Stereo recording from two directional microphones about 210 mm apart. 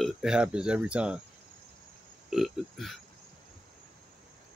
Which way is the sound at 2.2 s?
Centre (ahead or behind).